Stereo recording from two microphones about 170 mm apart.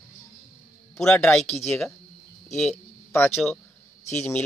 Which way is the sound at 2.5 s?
5° left (ahead or behind).